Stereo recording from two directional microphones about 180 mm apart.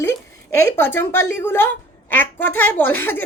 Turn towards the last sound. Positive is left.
turn(degrees=10)  # may be behind; listen again after turning